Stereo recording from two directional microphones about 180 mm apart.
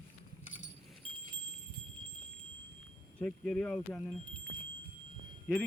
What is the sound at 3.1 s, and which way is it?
Speech, 5° left (ahead or behind).